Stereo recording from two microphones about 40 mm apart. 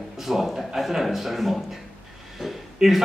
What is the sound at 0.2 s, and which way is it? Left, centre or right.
A man's voice, centre.